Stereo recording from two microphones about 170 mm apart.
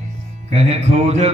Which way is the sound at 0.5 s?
40° right (ahead or behind).